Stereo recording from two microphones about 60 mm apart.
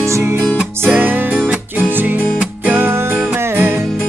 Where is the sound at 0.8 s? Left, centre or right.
Right.